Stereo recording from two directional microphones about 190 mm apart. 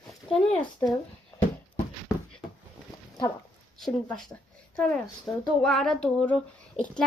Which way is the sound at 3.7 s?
Centre (ahead or behind).